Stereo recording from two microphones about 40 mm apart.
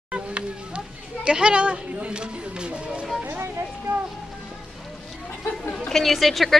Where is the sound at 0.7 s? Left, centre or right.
Right.